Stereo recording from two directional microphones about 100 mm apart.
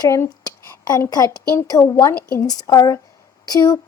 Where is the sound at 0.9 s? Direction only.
40° left (ahead or behind).